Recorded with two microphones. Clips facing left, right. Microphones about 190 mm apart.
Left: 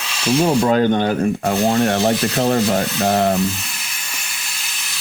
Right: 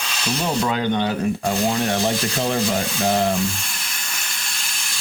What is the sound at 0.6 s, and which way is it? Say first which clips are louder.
Speech: left 6 dB; 45° left (ahead or behind).